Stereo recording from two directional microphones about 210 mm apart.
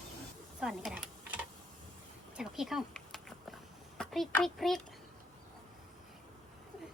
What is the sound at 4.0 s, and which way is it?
Speech, centre (ahead or behind).